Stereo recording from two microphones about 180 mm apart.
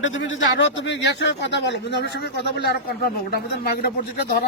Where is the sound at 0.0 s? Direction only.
90° left.